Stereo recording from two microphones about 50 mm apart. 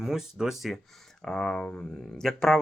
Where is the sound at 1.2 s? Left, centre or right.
Centre.